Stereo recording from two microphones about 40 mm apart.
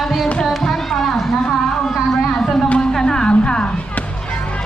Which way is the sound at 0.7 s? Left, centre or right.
Centre.